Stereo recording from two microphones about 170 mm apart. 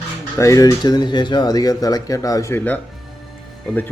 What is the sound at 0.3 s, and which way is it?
Speech, 20° left (ahead or behind).